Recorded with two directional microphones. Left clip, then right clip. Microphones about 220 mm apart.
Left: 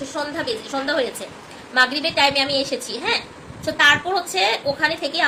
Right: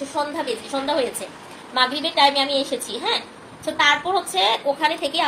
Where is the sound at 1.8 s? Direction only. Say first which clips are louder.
Left 2 dB; 35° left (ahead or behind).